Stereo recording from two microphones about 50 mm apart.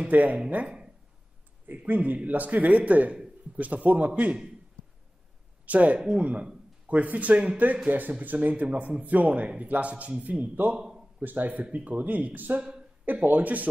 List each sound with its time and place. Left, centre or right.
0.0 s speech: right
1.9 s speech: right
5.7 s speech: right
5.9 s speech: centre
6.9 s speech: right
10.8 s a sound: centre
11.1 s speech: right